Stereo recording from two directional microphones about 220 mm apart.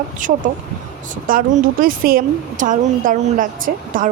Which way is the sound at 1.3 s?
40° right (ahead or behind).